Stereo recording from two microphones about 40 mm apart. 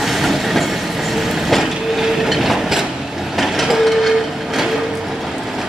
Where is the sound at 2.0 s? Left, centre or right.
Centre.